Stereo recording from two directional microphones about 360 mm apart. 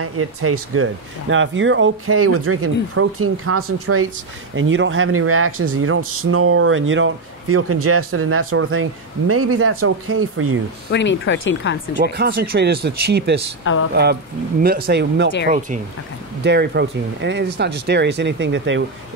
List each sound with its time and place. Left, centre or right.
0.0 s speech: right
10.9 s speech: left
12.0 s speech: right
13.7 s speech: left
14.6 s speech: right
16.4 s speech: right